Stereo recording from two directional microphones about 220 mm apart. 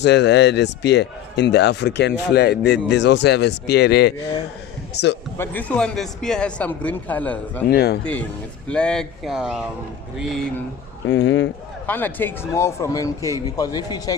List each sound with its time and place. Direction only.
0.0 s speech: 50° left (ahead or behind)
5.4 s speech: 5° left (ahead or behind)
7.7 s speech: 45° left (ahead or behind)
8.6 s speech: 5° left (ahead or behind)
11.1 s speech: 55° left (ahead or behind)
11.9 s speech: 10° left (ahead or behind)